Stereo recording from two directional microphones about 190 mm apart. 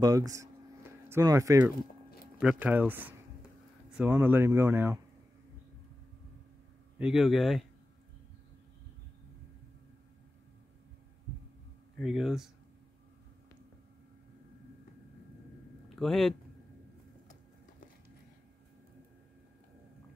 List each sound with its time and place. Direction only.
0.0 s speech: 20° right (ahead or behind)
7.0 s speech: centre (ahead or behind)
12.0 s speech: centre (ahead or behind)
16.0 s speech: centre (ahead or behind)